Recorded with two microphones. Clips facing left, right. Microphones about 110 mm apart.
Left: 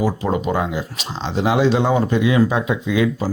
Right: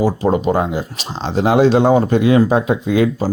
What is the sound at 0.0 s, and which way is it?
Speech, 35° right (ahead or behind).